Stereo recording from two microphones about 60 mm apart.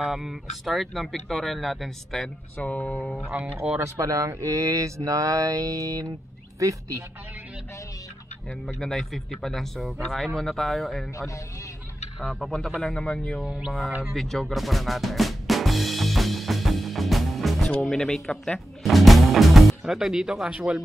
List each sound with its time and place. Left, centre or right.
0.0 s speech: centre
2.5 s mantra: left
3.8 s speech: right
4.3 s mantra: right
8.7 s speech: centre
11.1 s a man's voice: left
12.2 s speech: centre
12.8 s speech: centre
13.7 s speech: centre
14.1 s drum: centre
17.8 s speech: centre
18.8 s music: centre